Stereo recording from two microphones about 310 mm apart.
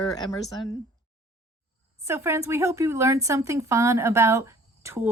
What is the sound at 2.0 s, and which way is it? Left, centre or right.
Speech, centre.